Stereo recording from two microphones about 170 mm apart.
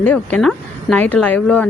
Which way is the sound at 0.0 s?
10° left (ahead or behind).